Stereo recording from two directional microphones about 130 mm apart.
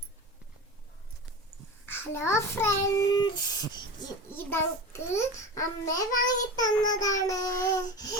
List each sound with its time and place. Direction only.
1.9 s a child's voice: 20° left (ahead or behind)
3.1 s a sound: 30° left (ahead or behind)
4.3 s a child's voice: 15° left (ahead or behind)